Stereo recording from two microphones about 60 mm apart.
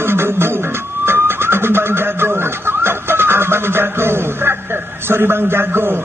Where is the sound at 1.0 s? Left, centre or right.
Right.